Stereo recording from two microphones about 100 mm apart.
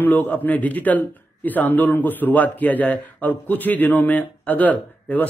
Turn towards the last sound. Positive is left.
turn(degrees=15)  # may be behind; listen again after turning